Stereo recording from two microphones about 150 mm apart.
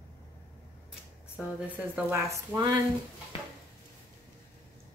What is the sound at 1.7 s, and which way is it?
A woman's voice, 15° right (ahead or behind).